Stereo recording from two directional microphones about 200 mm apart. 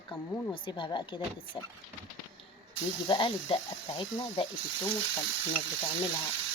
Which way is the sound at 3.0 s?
25° left (ahead or behind).